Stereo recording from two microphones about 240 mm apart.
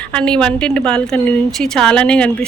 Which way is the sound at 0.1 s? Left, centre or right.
Centre.